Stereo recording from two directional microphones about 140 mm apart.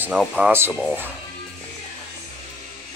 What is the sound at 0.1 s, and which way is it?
Speech, centre (ahead or behind).